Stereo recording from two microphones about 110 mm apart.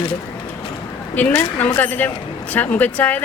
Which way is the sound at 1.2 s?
15° left (ahead or behind).